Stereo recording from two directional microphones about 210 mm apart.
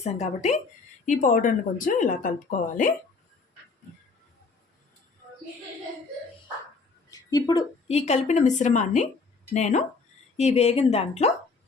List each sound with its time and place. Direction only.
0.0 s speech: 30° left (ahead or behind)
7.1 s a sound: 15° left (ahead or behind)
7.9 s speech: 30° left (ahead or behind)